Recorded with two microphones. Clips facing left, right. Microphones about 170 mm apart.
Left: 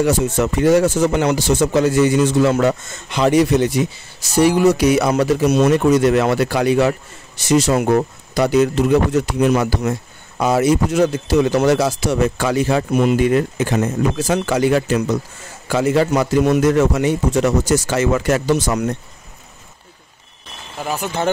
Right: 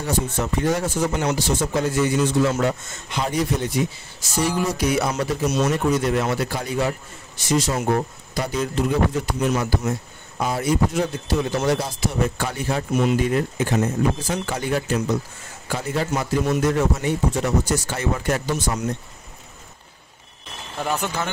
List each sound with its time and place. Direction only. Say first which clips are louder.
0.0 s a man's voice: left 8 dB; 85° left
20.8 s speech: left 1 dB; 10° left (ahead or behind)